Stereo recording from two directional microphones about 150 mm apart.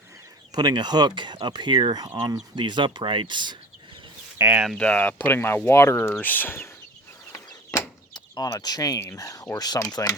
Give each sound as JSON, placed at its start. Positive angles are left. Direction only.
{"t": 0.5, "sound": "speech", "side_deg": -30}
{"t": 4.4, "sound": "speech", "side_deg": -15}
{"t": 4.6, "sound": "speech", "side_deg": 5}
{"t": 7.3, "sound": "speech", "side_deg": 25}